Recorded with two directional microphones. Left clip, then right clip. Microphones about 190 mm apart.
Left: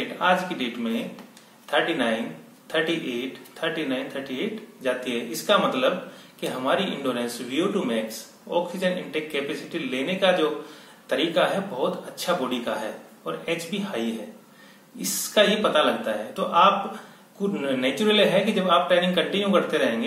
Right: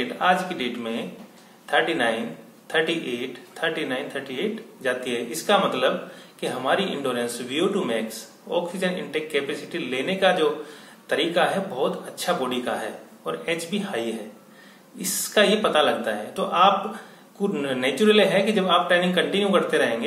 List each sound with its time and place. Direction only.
0.2 s a man's voice: 5° left (ahead or behind)